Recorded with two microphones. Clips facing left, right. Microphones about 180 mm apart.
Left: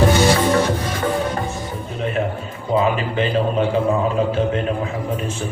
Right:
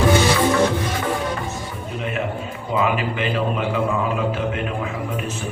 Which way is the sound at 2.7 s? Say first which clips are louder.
Left 3 dB; 30° left (ahead or behind).